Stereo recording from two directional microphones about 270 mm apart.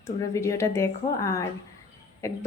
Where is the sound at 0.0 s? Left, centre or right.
Centre.